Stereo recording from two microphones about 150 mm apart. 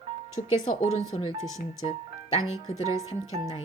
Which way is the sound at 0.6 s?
60° left (ahead or behind).